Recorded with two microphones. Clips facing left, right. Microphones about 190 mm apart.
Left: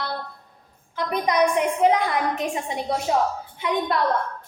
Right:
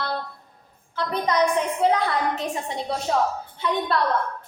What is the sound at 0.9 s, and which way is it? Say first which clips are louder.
A woman's voice: left 1 dB; 15° left (ahead or behind).